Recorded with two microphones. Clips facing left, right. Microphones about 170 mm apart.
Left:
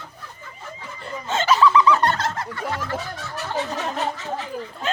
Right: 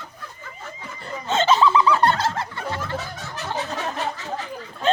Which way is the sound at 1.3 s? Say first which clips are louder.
Even; 25° right (ahead or behind).